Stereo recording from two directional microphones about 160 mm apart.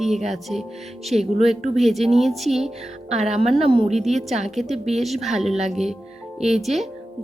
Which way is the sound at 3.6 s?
40° right (ahead or behind).